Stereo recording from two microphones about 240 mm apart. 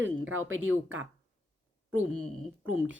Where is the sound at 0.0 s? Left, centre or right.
Right.